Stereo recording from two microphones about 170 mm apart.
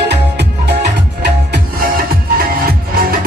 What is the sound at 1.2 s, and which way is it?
Music, 65° right (ahead or behind).